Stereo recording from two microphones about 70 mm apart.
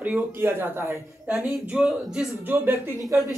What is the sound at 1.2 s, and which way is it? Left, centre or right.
Speech, right.